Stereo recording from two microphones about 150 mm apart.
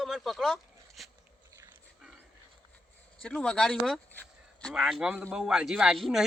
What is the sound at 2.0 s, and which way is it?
Dog, 5° right (ahead or behind).